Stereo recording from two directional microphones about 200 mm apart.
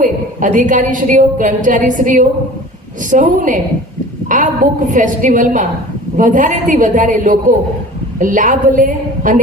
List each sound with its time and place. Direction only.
0.0 s a woman's voice: 40° right (ahead or behind)